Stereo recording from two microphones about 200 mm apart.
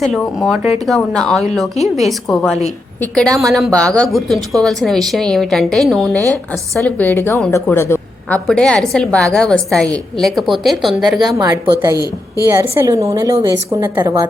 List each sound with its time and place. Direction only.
0.0 s a woman's voice: centre (ahead or behind)
3.0 s a woman's voice: 5° left (ahead or behind)
11.3 s a woman's voice: 20° right (ahead or behind)